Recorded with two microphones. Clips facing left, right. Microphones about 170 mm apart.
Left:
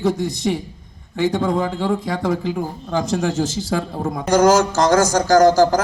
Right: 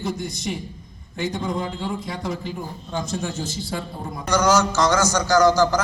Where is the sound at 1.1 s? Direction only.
70° left (ahead or behind).